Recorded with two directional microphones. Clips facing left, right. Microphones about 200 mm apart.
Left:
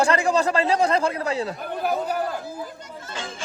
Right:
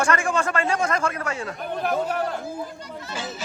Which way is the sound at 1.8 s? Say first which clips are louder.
Even; 5° left (ahead or behind).